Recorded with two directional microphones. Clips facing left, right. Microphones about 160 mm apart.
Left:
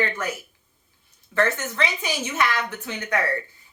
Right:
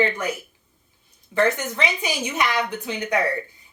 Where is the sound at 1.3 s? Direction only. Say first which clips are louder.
Right 2 dB; 15° right (ahead or behind).